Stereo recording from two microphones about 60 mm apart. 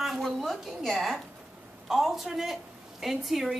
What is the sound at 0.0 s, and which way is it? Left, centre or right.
A woman's voice, centre.